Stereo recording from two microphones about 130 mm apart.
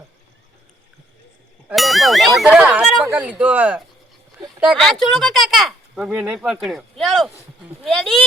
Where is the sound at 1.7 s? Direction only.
Centre (ahead or behind).